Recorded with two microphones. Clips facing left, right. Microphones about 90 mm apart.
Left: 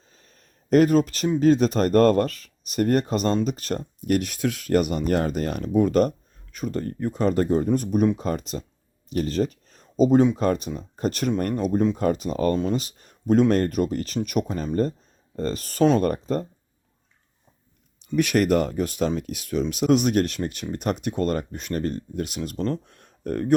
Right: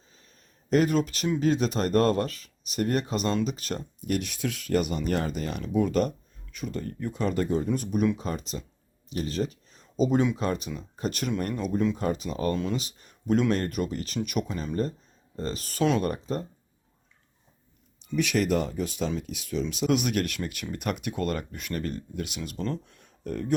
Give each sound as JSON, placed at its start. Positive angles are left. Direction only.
{"t": 0.1, "sound": "a sound", "side_deg": 45}
{"t": 1.4, "sound": "speech", "side_deg": 40}
{"t": 18.2, "sound": "speech", "side_deg": 55}
{"t": 19.9, "sound": "speech", "side_deg": 35}